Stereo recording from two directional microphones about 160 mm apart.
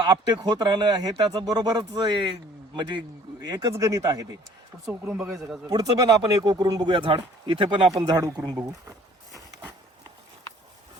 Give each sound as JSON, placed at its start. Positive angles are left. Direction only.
{"t": 0.0, "sound": "speech", "side_deg": -25}
{"t": 3.4, "sound": "speech", "side_deg": -25}
{"t": 5.3, "sound": "speech", "side_deg": 0}
{"t": 5.6, "sound": "speech", "side_deg": -25}
{"t": 8.5, "sound": "a sound", "side_deg": -20}